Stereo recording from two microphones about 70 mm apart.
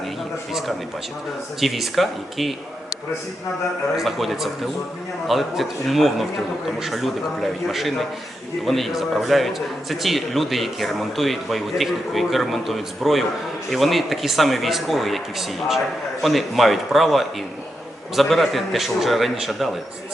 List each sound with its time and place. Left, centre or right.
1.6 s a man's voice: centre
3.9 s a man's voice: centre